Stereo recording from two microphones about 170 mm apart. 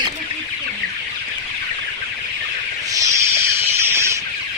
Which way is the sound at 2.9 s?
20° right (ahead or behind).